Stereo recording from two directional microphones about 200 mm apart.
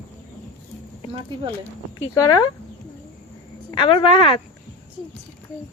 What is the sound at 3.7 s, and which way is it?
Speech, 25° left (ahead or behind).